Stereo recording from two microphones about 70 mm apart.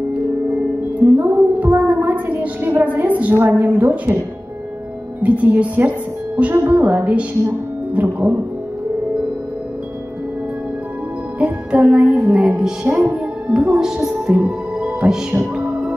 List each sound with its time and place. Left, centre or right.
1.0 s a woman's voice: right
5.2 s a woman's voice: right
11.3 s music: centre
12.9 s a woman's voice: centre